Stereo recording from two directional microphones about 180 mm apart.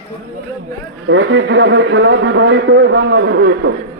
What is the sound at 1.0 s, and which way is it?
A man's voice, 90° right.